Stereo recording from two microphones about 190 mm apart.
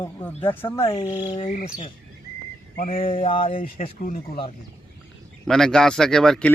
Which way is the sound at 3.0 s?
30° left (ahead or behind).